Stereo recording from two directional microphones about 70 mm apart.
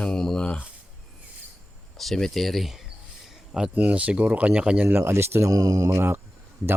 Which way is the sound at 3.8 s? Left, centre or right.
Right.